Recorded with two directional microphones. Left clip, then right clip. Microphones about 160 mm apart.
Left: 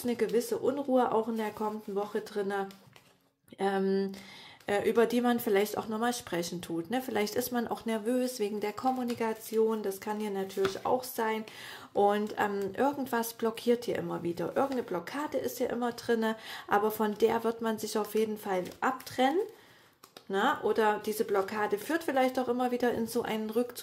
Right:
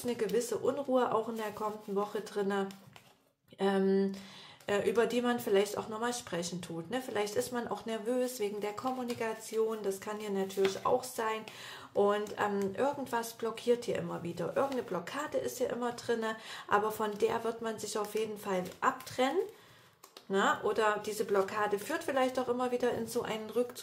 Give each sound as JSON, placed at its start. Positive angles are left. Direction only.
{"t": 0.0, "sound": "speech", "side_deg": 30}